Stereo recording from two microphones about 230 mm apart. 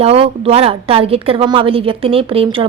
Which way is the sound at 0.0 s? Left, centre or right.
Right.